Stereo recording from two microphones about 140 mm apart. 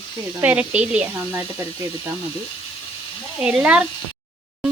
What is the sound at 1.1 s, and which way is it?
Speech, 20° right (ahead or behind).